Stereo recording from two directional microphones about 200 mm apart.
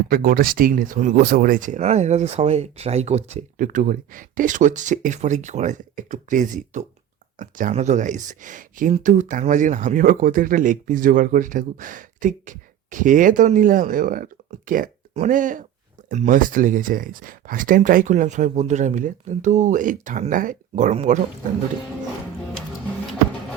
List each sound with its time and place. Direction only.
0.1 s speech: 45° right (ahead or behind)